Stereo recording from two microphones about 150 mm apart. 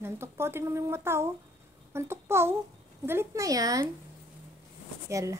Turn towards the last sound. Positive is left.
turn(degrees=-20)  # may be behind; listen again after turning